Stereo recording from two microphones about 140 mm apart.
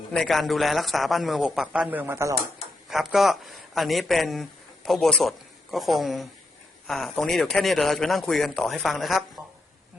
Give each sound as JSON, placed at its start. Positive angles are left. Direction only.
{"t": 0.1, "sound": "a man's voice", "side_deg": 0}
{"t": 2.9, "sound": "a man's voice", "side_deg": 0}